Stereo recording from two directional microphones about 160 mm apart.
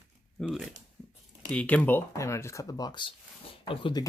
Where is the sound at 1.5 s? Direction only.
10° left (ahead or behind).